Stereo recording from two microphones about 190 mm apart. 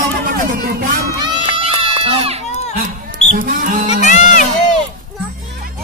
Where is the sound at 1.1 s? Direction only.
25° right (ahead or behind).